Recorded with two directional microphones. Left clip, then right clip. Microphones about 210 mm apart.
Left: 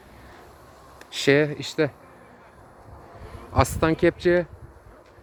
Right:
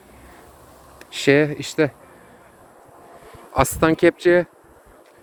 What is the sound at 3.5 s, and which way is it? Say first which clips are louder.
Speech: right 4 dB; 15° right (ahead or behind).